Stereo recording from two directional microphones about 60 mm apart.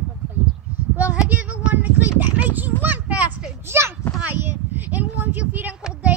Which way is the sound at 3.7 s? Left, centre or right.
Right.